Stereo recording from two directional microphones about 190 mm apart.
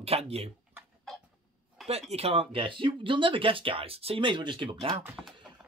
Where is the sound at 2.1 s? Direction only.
30° right (ahead or behind).